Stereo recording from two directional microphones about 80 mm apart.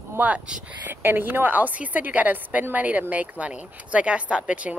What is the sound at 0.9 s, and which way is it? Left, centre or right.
Speech, right.